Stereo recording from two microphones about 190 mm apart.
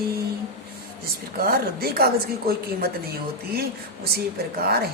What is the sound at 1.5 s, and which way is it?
Speech, 55° right (ahead or behind).